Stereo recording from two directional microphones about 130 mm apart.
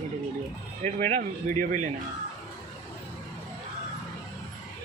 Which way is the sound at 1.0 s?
65° right (ahead or behind).